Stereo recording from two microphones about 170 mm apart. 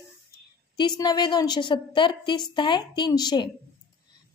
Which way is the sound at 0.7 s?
25° left (ahead or behind).